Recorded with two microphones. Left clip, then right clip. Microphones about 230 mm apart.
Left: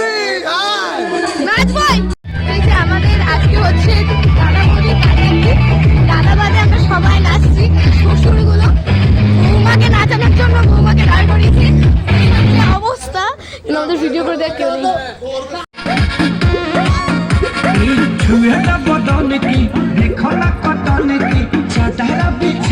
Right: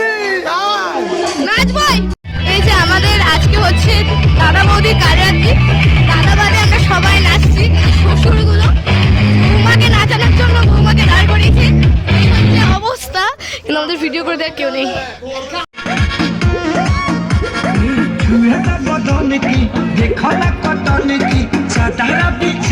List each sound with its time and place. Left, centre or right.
0.3 s a sound: centre
1.5 s music: centre
2.5 s music: centre
6.1 s music: centre
9.6 s speech: centre
13.1 s a woman's voice: centre
16.7 s music: left
19.3 s music: left
20.2 s music: right
22.0 s music: centre